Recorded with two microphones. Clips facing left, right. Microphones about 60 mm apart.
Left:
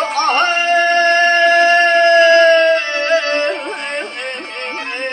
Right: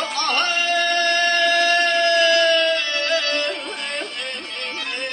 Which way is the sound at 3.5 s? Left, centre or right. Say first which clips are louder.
Left 6 dB; left.